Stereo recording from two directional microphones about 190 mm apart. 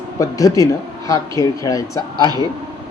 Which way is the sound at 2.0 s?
20° right (ahead or behind).